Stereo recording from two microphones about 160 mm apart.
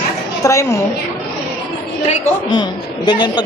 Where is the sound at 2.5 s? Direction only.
30° left (ahead or behind).